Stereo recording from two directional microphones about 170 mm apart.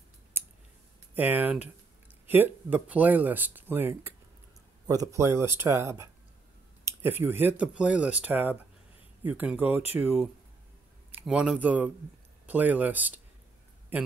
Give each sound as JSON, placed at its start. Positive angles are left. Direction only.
{"t": 0.3, "sound": "clicking", "side_deg": -10}
{"t": 1.1, "sound": "speech", "side_deg": -10}